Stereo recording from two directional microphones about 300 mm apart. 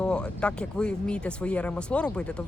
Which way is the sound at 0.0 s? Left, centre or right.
Centre.